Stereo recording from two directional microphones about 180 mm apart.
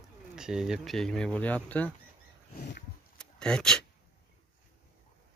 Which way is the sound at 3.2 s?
5° left (ahead or behind).